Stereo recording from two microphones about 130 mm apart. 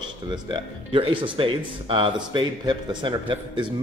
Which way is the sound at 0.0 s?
35° right (ahead or behind).